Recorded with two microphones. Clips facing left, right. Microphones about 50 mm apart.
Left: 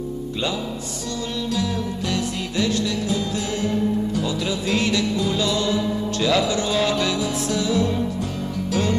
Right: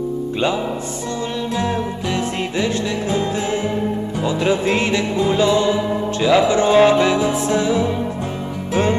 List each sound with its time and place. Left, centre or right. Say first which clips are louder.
2.1 s music: right 4 dB; right